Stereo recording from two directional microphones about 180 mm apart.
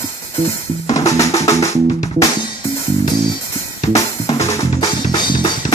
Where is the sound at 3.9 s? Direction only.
15° left (ahead or behind).